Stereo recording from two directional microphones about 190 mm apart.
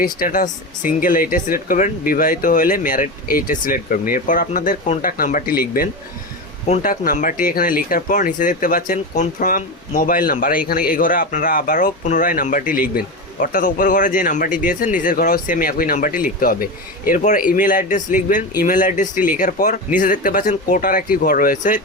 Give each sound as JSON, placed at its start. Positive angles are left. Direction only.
{"t": 0.0, "sound": "speech", "side_deg": 50}